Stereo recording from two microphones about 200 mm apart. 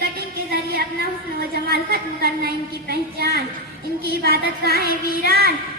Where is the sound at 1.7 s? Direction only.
50° right (ahead or behind).